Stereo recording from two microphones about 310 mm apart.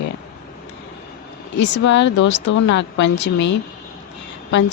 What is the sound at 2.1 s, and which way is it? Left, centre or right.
A woman's voice, left.